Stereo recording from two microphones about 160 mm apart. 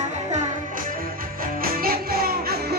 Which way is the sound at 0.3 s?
45° right (ahead or behind).